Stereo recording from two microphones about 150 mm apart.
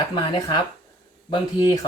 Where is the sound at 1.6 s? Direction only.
25° left (ahead or behind).